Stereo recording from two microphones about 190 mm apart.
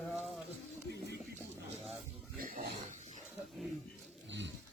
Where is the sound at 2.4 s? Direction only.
50° right (ahead or behind).